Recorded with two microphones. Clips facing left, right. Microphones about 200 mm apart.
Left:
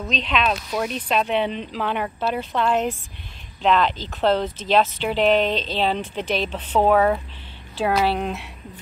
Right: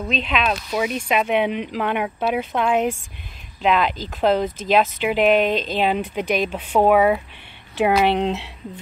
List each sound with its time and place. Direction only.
0.0 s speech: 5° right (ahead or behind); by 8.5 s 25° right (ahead or behind)